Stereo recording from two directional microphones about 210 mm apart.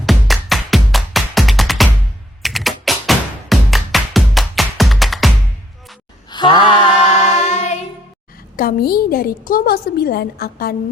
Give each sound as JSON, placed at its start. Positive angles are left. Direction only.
{"t": 0.0, "sound": "music", "side_deg": 0}
{"t": 6.3, "sound": "a sound", "side_deg": 20}
{"t": 6.8, "sound": "music", "side_deg": 0}
{"t": 7.4, "sound": "music", "side_deg": 35}
{"t": 8.5, "sound": "a woman's voice", "side_deg": 45}